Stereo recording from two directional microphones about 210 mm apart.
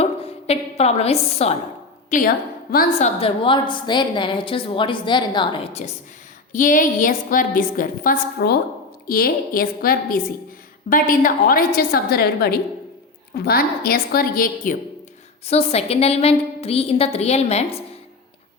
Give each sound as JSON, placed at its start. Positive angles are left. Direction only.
{"t": 0.0, "sound": "a woman's voice", "side_deg": 30}
{"t": 6.5, "sound": "a woman's voice", "side_deg": 40}
{"t": 15.4, "sound": "a woman's voice", "side_deg": 30}